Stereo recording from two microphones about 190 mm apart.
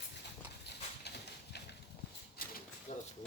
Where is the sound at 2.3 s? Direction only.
50° left (ahead or behind).